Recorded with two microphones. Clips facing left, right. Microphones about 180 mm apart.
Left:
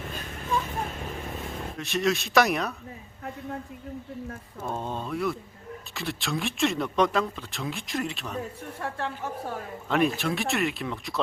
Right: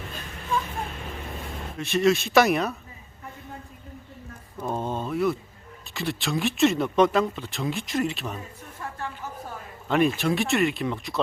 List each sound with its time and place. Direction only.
1.8 s speech: centre (ahead or behind)
4.7 s speech: centre (ahead or behind)
8.8 s a woman's voice: 70° left (ahead or behind)
10.2 s speech: centre (ahead or behind)